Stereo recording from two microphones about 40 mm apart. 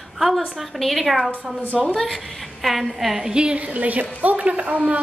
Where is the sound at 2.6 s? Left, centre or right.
Centre.